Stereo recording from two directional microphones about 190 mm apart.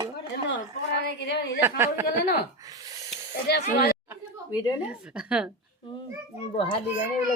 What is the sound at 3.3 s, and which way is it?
Speech, 60° left (ahead or behind).